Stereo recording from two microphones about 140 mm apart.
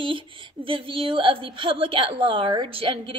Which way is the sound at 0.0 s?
40° right (ahead or behind).